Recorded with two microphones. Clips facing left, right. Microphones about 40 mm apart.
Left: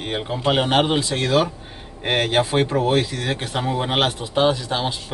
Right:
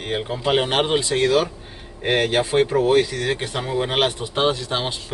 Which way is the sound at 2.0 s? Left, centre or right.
Centre.